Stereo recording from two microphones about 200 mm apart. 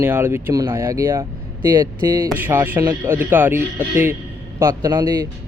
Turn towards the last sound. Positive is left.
turn(degrees=-20)  # may be behind; listen again after turning